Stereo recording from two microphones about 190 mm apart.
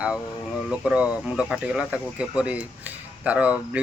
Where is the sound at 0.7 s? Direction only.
5° right (ahead or behind).